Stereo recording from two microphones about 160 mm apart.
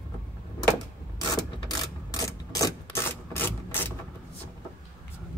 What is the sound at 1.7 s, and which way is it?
Rub, 25° left (ahead or behind).